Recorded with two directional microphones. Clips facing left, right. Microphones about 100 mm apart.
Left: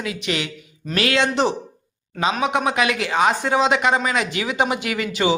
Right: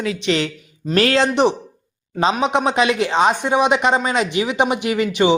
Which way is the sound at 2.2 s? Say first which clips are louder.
Right 3 dB; 25° right (ahead or behind).